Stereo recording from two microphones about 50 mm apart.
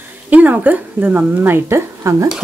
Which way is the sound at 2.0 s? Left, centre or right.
Right.